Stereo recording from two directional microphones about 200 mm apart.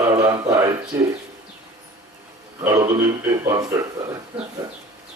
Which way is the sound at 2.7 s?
15° right (ahead or behind).